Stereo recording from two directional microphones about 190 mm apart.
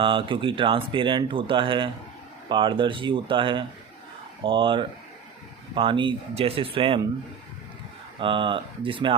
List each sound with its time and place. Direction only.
0.0 s speech: 25° right (ahead or behind)
8.2 s speech: 25° right (ahead or behind)